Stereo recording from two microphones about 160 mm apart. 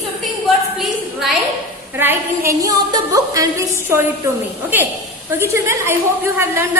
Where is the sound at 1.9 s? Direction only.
15° right (ahead or behind).